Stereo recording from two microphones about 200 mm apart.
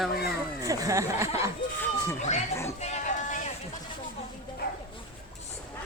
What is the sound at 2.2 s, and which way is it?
Speech, 35° left (ahead or behind).